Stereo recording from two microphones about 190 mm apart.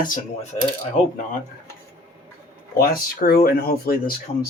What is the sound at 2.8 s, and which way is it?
Speech, 50° left (ahead or behind).